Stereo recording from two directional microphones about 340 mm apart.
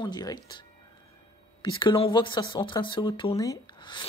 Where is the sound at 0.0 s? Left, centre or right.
Centre.